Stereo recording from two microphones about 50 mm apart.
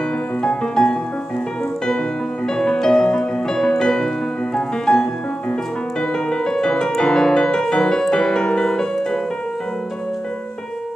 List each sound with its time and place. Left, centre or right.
0.4 s music: centre
2.5 s music: centre
6.3 s music: centre